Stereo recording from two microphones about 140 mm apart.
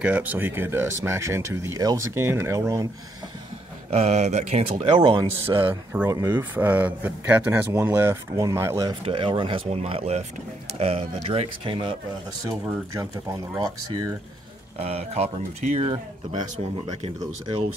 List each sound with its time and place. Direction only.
0.0 s speech: 10° right (ahead or behind)
3.9 s speech: 50° right (ahead or behind)
4.9 s speech: 35° right (ahead or behind)
6.0 s speech: 20° right (ahead or behind)
9.0 s speech: 35° right (ahead or behind)
12.9 s speech: 25° right (ahead or behind)
14.8 s speech: 45° right (ahead or behind)